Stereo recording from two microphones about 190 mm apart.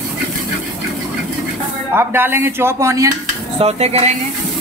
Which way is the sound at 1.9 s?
10° right (ahead or behind).